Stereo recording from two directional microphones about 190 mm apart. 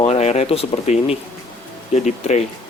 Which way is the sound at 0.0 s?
35° left (ahead or behind).